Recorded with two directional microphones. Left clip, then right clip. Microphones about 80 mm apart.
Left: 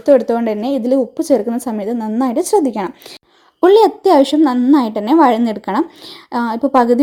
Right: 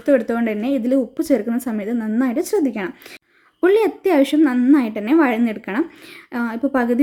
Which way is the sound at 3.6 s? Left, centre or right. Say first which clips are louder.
Left 6 dB; left.